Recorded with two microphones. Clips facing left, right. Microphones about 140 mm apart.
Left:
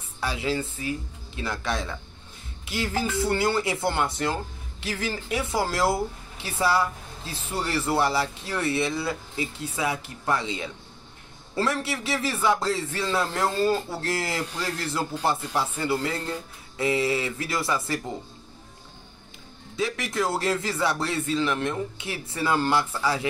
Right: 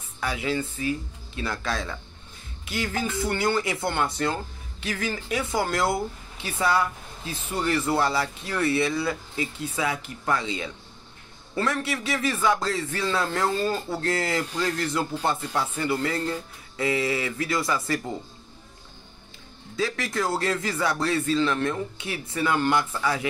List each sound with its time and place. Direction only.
0.2 s speech: 25° left (ahead or behind)
13.7 s speech: centre (ahead or behind)
14.3 s speech: 25° left (ahead or behind)
19.8 s speech: 25° left (ahead or behind)